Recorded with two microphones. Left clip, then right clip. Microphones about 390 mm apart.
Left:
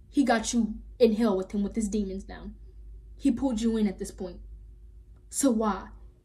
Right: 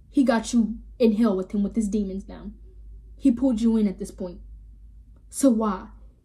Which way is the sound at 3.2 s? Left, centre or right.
Centre.